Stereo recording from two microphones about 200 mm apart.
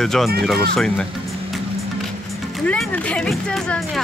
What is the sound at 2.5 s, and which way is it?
Speech, 5° left (ahead or behind).